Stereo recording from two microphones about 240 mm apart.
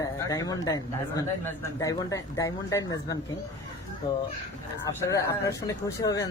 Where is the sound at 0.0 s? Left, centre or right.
Centre.